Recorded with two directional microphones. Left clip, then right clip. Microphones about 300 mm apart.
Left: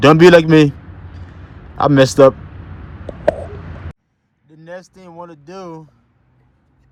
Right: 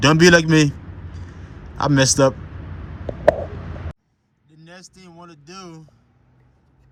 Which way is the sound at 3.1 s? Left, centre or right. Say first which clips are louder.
Right 1 dB; left.